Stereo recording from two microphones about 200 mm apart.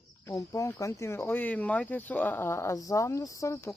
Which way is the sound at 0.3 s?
15° left (ahead or behind).